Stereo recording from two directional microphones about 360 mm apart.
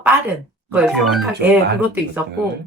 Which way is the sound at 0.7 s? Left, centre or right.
Centre.